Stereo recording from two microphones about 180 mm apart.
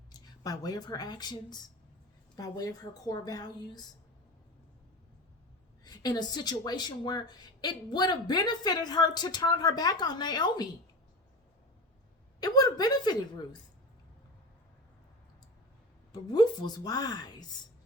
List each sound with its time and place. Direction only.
0.1 s speech: 20° left (ahead or behind)
5.8 s speech: 20° left (ahead or behind)
12.4 s speech: 20° left (ahead or behind)
16.1 s speech: 20° left (ahead or behind)